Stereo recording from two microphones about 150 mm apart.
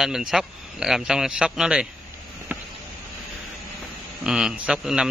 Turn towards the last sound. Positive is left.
turn(degrees=-5)  # may be behind; listen again after turning